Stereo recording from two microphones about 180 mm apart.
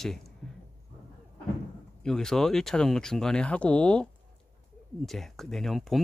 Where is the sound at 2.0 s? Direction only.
5° left (ahead or behind).